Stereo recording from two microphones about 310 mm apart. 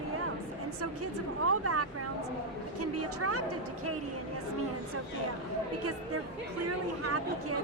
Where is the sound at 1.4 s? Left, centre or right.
Right.